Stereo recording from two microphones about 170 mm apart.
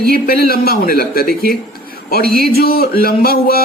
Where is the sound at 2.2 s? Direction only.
60° right (ahead or behind).